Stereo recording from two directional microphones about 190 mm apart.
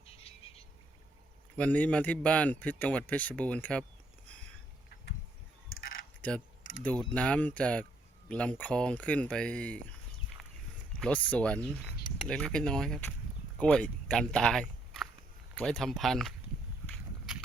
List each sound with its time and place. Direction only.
0.1 s a sound: 30° left (ahead or behind)
1.5 s a man's voice: 5° left (ahead or behind)
6.2 s a man's voice: 5° left (ahead or behind)
10.4 s walk: centre (ahead or behind)
11.0 s a man's voice: 5° left (ahead or behind)